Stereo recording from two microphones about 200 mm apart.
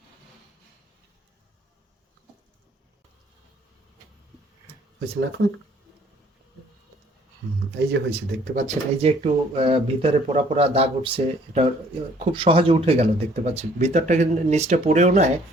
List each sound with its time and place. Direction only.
7.8 s speech: 55° right (ahead or behind)
8.6 s speech: 35° right (ahead or behind)